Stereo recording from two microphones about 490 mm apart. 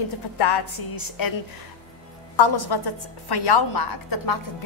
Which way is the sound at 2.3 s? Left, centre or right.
Left.